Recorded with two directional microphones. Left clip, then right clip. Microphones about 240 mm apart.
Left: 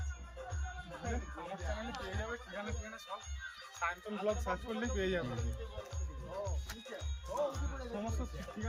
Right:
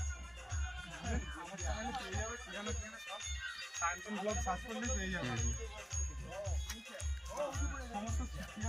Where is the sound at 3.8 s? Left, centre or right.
Left.